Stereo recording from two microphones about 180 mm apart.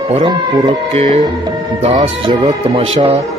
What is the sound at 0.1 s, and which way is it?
Speech, 25° right (ahead or behind).